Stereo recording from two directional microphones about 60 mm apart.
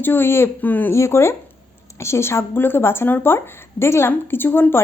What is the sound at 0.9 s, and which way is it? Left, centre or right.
Speech, left.